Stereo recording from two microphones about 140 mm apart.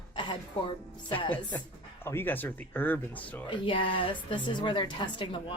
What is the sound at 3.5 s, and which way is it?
Speech, 40° left (ahead or behind).